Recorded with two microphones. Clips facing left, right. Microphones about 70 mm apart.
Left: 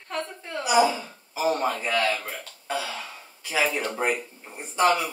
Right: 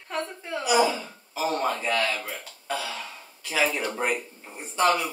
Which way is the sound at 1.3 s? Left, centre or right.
Centre.